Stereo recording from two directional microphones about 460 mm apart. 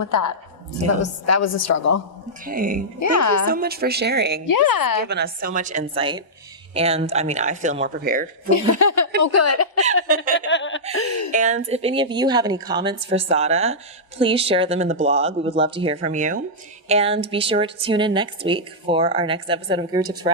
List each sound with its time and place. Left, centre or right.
0.0 s a woman's voice: left
2.4 s a woman's voice: centre
3.0 s a woman's voice: left
3.4 s speech: centre
4.4 s a woman's voice: left
5.0 s a woman's voice: right
8.8 s a woman's voice: left
11.3 s a woman's voice: centre